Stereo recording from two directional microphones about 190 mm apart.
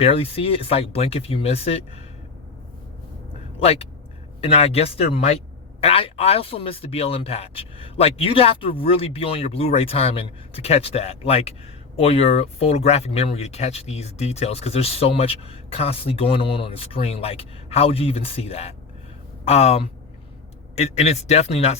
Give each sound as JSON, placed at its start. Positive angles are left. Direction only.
{"t": 0.0, "sound": "speech", "side_deg": 30}
{"t": 3.6, "sound": "speech", "side_deg": 30}